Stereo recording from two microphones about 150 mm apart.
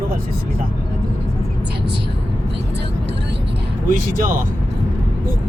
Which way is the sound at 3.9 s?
65° right (ahead or behind).